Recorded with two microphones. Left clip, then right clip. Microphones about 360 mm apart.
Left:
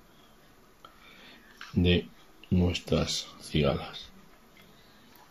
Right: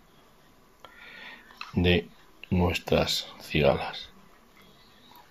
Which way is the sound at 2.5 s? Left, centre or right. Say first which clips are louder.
Right 3 dB; right.